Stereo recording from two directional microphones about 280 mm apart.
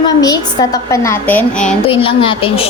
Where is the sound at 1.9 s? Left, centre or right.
Centre.